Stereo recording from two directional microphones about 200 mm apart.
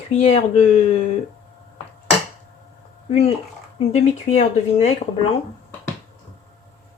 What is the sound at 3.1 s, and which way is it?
Speech, 30° left (ahead or behind).